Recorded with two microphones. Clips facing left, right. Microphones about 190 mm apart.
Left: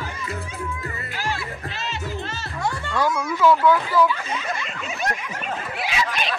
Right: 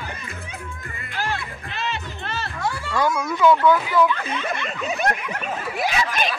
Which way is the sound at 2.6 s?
5° right (ahead or behind).